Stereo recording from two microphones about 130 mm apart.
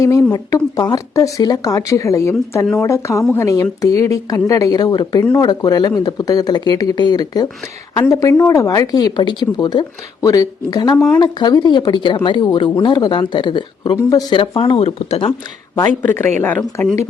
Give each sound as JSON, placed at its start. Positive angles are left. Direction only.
{"t": 0.0, "sound": "speech", "side_deg": 25}
{"t": 16.0, "sound": "speech", "side_deg": 15}